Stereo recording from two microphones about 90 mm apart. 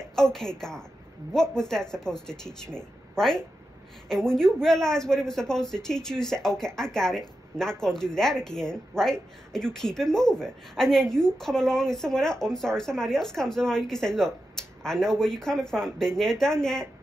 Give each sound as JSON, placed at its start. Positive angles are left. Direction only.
{"t": 0.1, "sound": "a woman's voice", "side_deg": 5}